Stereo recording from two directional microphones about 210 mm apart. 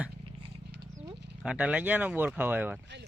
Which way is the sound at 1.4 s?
5° right (ahead or behind).